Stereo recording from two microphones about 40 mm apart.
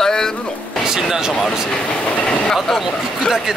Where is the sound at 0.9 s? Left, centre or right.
Centre.